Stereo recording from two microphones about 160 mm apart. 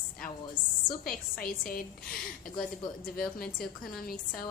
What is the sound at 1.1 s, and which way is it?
A woman's voice, 65° left (ahead or behind).